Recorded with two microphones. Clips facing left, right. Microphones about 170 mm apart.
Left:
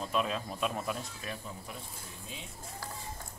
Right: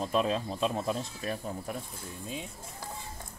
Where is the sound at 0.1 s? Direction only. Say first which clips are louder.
Right 3 dB; 35° right (ahead or behind).